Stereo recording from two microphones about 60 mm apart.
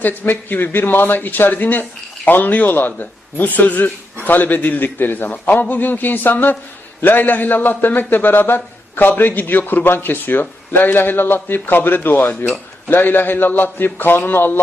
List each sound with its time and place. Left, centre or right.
0.0 s speech: left